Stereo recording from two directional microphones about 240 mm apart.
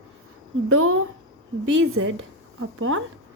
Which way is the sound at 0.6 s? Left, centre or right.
Right.